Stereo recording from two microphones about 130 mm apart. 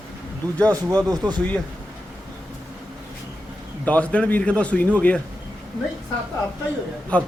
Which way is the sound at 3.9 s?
10° left (ahead or behind).